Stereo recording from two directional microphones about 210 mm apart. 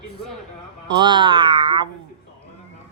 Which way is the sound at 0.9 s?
20° right (ahead or behind).